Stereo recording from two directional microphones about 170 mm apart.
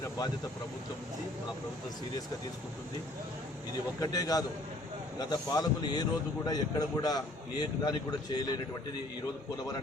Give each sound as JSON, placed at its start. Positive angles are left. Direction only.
{"t": 4.0, "sound": "a man's voice", "side_deg": 20}